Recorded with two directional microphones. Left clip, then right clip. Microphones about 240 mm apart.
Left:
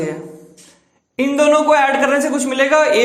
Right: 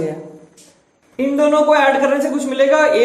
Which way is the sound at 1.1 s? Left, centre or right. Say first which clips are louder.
Left 1 dB; left.